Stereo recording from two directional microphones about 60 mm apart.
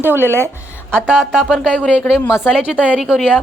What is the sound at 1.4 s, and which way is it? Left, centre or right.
Speech, centre.